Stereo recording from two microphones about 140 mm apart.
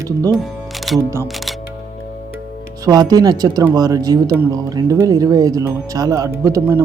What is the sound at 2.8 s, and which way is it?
Speech, 25° right (ahead or behind).